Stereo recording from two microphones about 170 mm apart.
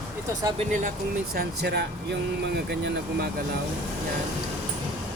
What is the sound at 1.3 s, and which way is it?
Speech, 80° right.